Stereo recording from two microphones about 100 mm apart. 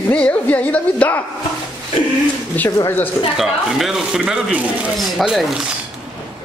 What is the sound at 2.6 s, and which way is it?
Speech, 15° left (ahead or behind).